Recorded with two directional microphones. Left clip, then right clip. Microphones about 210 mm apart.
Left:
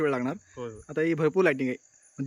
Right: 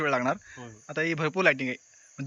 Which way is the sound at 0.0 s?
15° left (ahead or behind).